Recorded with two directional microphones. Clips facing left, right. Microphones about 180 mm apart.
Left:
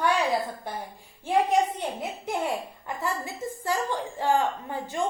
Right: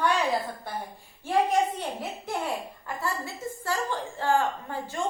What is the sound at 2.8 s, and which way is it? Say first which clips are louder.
A woman's voice: left 1 dB; 20° left (ahead or behind).